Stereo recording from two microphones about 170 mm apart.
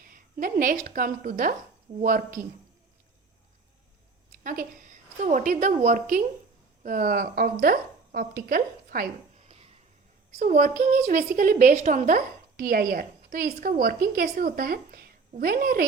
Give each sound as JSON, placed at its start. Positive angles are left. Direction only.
{"t": 0.0, "sound": "a woman's voice", "side_deg": -55}
{"t": 4.3, "sound": "a woman's voice", "side_deg": -55}